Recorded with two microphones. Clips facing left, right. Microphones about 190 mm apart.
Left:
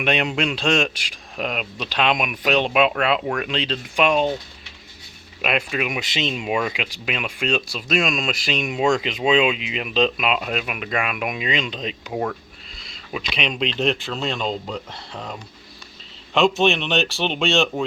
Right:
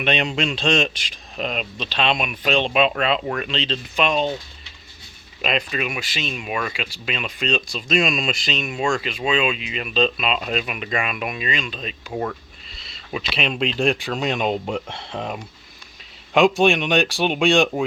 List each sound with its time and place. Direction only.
0.0 s speech: 10° left (ahead or behind)
5.4 s speech: 10° left (ahead or behind)
13.1 s speech: 5° right (ahead or behind)